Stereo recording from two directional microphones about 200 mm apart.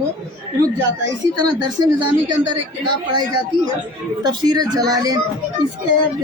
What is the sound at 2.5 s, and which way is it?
Speech, 20° right (ahead or behind).